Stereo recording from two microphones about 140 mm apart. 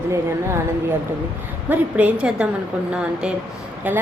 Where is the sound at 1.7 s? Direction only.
10° right (ahead or behind).